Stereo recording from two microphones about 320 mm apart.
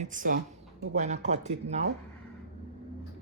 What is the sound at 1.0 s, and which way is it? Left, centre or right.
Speech, right.